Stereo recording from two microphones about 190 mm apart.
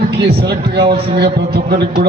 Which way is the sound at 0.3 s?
60° right (ahead or behind).